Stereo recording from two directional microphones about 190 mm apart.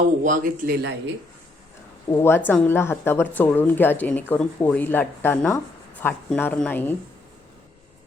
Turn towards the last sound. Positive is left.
turn(degrees=10)  # may be behind; listen again after turning